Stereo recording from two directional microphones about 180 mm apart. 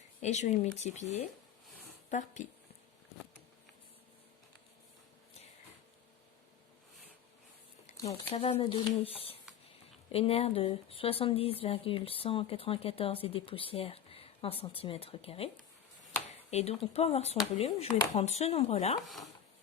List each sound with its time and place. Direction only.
0.2 s a woman's voice: 40° left (ahead or behind)
8.0 s a woman's voice: 35° left (ahead or behind)
16.5 s a woman's voice: 35° left (ahead or behind)
19.0 s speech: centre (ahead or behind)